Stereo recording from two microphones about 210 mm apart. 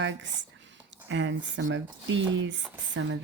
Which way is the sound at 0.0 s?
60° right (ahead or behind).